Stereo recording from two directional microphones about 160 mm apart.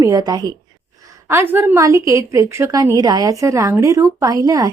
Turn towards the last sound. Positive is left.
turn(degrees=-20)  # may be behind; listen again after turning